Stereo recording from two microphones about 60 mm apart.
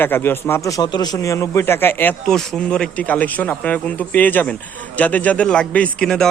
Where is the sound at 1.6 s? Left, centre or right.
Left.